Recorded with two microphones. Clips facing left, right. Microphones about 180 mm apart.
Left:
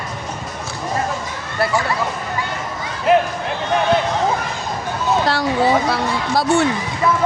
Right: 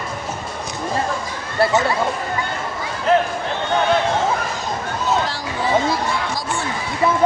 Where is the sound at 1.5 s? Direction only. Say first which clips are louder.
Right 2 dB; 25° right (ahead or behind).